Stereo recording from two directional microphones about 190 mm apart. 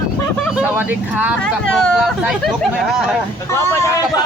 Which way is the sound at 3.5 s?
15° left (ahead or behind).